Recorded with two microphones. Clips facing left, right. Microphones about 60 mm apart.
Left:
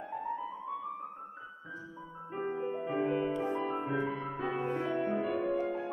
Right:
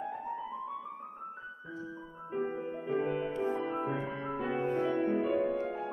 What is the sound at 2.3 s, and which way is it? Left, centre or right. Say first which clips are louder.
Music: even; centre.